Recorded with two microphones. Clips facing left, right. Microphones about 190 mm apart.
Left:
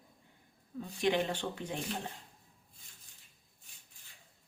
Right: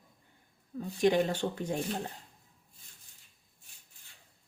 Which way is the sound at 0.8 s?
45° right (ahead or behind).